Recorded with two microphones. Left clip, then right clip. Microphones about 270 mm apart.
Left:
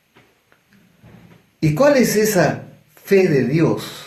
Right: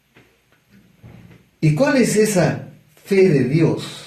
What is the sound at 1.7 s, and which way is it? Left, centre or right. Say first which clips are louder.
Speech: left 2 dB; left.